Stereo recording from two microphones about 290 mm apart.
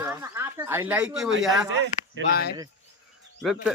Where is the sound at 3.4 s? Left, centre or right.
Centre.